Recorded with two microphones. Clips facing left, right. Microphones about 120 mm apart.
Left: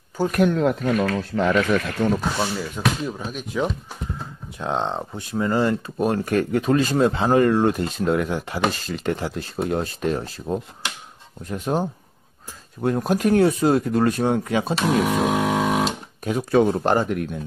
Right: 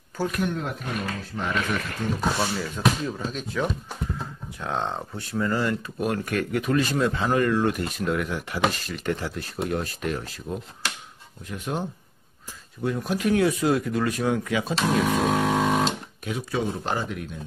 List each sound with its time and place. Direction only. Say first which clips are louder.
0.4 s speech: left 9 dB; 90° left
2.0 s speech: left 8 dB; 65° left (ahead or behind)
2.3 s speech: left 2 dB; 10° left (ahead or behind); by 14.8 s 35° left (ahead or behind)
14.8 s vehicle: left 1 dB; 10° left (ahead or behind)
16.3 s speech: left 9 dB; 50° left (ahead or behind)